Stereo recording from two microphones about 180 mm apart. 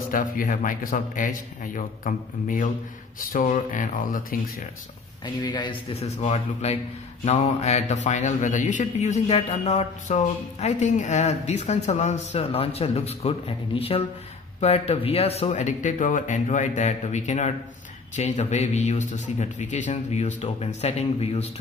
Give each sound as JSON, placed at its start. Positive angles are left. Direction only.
{"t": 0.1, "sound": "a man's voice", "side_deg": 50}
{"t": 5.2, "sound": "speech", "side_deg": 25}